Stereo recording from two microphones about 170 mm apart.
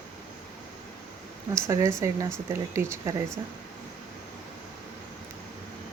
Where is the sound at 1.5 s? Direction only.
15° right (ahead or behind).